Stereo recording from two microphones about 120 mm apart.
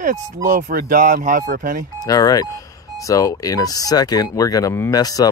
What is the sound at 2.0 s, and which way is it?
Speech, 30° left (ahead or behind).